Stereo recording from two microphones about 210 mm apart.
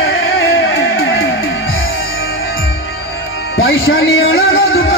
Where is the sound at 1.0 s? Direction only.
75° left (ahead or behind).